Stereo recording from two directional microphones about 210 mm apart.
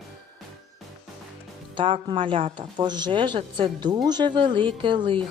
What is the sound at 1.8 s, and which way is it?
Speech, 25° right (ahead or behind).